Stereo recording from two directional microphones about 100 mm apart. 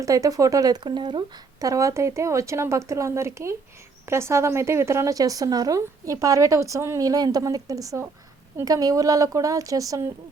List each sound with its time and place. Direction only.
0.0 s speech: 35° right (ahead or behind)
1.6 s speech: 35° right (ahead or behind)